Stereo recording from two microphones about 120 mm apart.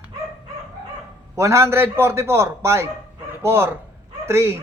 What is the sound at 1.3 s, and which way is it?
A man's voice, 20° right (ahead or behind).